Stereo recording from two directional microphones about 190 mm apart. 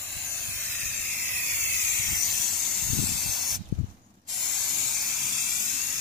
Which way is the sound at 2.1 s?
Centre (ahead or behind).